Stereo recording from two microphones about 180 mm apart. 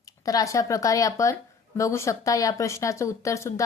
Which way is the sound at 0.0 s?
20° left (ahead or behind).